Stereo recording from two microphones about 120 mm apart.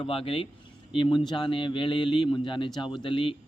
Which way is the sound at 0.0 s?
50° left (ahead or behind).